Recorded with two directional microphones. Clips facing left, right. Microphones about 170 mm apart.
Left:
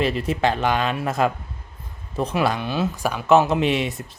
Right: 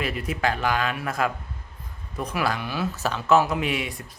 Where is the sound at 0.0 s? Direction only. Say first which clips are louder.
Left 5 dB; 25° left (ahead or behind).